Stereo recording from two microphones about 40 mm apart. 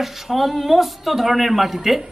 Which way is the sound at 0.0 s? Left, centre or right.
Centre.